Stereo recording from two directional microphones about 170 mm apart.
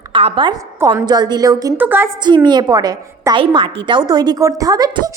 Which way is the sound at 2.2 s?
25° right (ahead or behind).